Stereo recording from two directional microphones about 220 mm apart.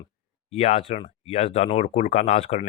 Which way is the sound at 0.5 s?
30° left (ahead or behind).